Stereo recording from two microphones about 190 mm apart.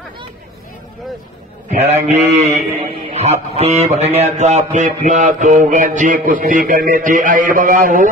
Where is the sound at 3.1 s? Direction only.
35° right (ahead or behind).